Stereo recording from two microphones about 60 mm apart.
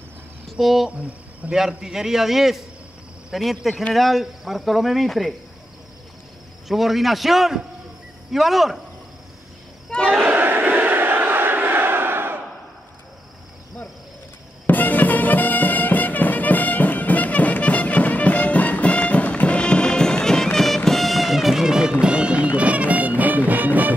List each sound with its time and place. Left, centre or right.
0.5 s speech: centre
0.8 s speech: right
1.5 s a man's voice: centre
6.7 s speech: centre
9.8 s crowd: centre
10.2 s crowd: right
14.7 s music: left; by 23.9 s right